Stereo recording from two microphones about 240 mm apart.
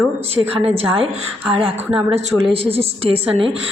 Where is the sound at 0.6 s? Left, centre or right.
Right.